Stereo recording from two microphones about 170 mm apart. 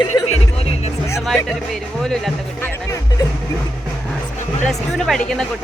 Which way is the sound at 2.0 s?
5° left (ahead or behind).